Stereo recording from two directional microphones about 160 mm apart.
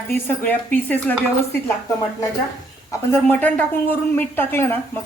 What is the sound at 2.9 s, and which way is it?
Speech, 15° left (ahead or behind).